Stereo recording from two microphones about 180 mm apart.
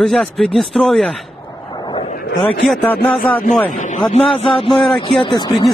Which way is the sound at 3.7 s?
45° left (ahead or behind).